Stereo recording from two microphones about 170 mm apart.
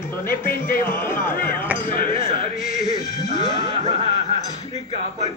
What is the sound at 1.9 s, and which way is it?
Speech, 55° left (ahead or behind).